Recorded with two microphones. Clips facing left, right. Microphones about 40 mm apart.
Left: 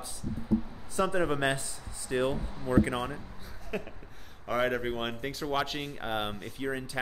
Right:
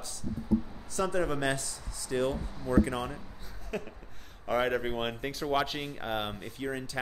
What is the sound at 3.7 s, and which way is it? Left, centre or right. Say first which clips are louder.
Speech: left 1 dB; centre.